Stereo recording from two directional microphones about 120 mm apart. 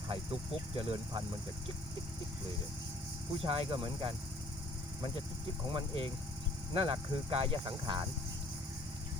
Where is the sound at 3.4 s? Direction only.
50° right (ahead or behind).